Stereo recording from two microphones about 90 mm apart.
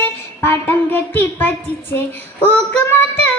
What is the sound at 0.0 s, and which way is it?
Speech, 25° left (ahead or behind).